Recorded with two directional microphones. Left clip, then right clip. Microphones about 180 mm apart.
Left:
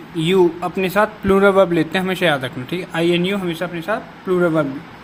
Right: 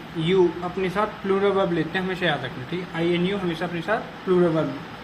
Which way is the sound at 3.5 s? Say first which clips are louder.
Left 3 dB; 40° left (ahead or behind).